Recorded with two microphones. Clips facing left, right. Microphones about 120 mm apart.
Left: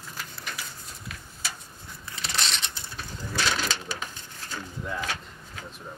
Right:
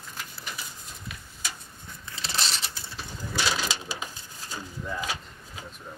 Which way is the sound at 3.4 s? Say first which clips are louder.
Left 1 dB; 10° right (ahead or behind).